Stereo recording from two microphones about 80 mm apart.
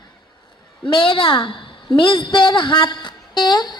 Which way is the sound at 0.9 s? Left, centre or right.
Left.